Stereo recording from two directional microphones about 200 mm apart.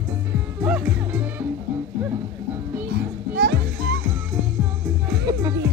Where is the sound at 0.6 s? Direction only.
5° right (ahead or behind).